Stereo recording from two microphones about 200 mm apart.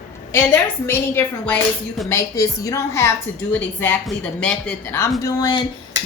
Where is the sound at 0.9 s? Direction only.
10° left (ahead or behind).